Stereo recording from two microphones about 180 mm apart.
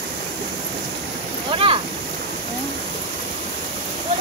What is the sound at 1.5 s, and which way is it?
Speech, 30° right (ahead or behind).